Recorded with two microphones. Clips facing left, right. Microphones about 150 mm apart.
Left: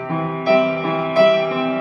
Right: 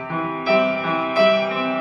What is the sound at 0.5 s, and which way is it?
Music, 45° left (ahead or behind).